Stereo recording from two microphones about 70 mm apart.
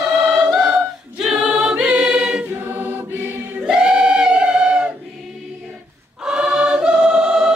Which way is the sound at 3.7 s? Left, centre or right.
Centre.